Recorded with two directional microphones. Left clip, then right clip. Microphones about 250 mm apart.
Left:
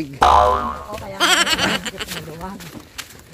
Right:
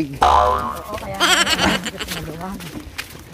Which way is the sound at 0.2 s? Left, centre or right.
Centre.